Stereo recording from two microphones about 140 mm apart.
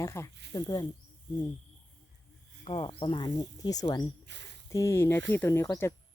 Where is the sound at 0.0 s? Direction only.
20° left (ahead or behind).